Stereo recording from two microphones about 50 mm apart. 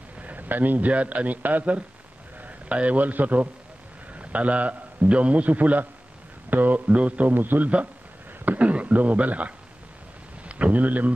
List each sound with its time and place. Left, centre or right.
0.2 s a man's voice: right
7.3 s speech: right
7.6 s speech: right